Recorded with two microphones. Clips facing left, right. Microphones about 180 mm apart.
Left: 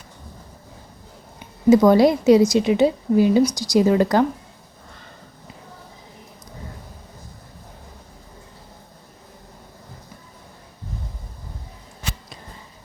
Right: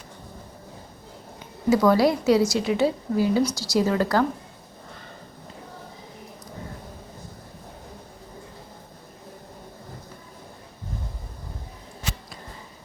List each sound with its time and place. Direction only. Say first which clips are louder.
1.7 s a woman's voice: left 5 dB; 20° left (ahead or behind)